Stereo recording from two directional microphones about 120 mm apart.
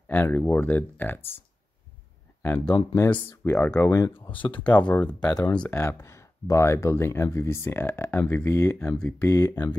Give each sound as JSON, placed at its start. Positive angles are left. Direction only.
{"t": 0.1, "sound": "speech", "side_deg": 15}
{"t": 2.4, "sound": "speech", "side_deg": 10}
{"t": 4.3, "sound": "speech", "side_deg": 45}
{"t": 4.6, "sound": "speech", "side_deg": 10}
{"t": 5.8, "sound": "speech", "side_deg": 25}